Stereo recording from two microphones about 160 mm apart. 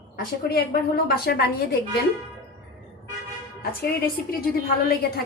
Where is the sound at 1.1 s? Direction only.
75° left (ahead or behind).